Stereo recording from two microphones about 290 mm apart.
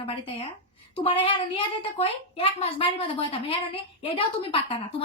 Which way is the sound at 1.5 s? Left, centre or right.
Centre.